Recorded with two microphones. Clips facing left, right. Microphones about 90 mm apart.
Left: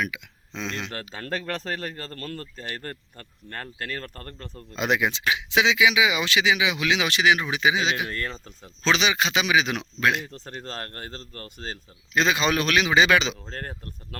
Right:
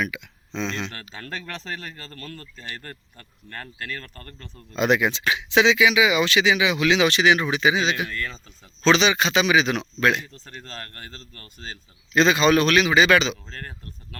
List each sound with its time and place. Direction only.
0.0 s speech: 5° left (ahead or behind)
0.7 s speech: 25° right (ahead or behind)
1.1 s speech: 40° left (ahead or behind)
4.8 s speech: 15° left (ahead or behind)
10.2 s speech: 55° left (ahead or behind)
12.1 s speech: 5° left (ahead or behind)
13.4 s speech: 40° left (ahead or behind)